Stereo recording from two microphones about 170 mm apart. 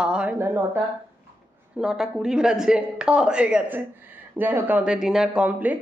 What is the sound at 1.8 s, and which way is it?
A woman's voice, 5° right (ahead or behind).